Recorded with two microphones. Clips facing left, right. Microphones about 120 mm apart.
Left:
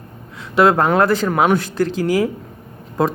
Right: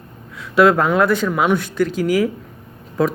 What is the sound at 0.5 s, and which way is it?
A man's voice, 25° left (ahead or behind).